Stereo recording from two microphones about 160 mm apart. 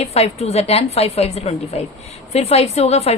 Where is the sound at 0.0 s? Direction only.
40° left (ahead or behind).